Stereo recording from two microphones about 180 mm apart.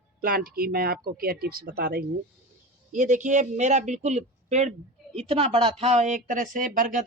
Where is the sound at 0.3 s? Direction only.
55° right (ahead or behind).